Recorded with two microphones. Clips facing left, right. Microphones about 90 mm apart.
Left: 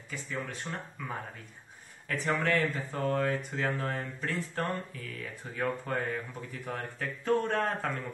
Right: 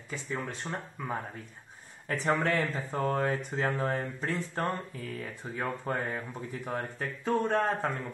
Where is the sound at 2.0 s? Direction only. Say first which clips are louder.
Right 2 dB; 30° right (ahead or behind).